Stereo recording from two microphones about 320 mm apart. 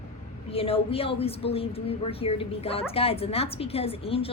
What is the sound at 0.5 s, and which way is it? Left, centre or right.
A woman's voice, centre.